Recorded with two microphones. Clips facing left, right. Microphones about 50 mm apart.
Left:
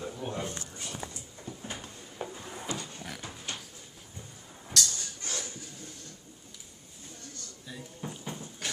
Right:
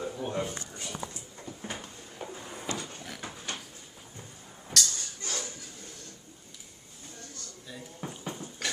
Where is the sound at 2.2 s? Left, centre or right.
Centre.